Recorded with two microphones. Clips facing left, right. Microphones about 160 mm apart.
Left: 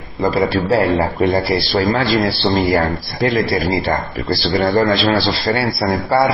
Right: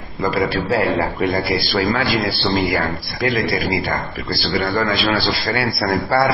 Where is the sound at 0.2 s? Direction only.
30° left (ahead or behind).